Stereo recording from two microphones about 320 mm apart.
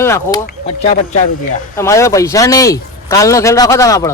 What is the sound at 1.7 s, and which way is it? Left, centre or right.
Speech, centre.